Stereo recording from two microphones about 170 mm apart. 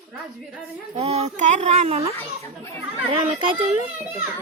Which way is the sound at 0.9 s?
40° right (ahead or behind).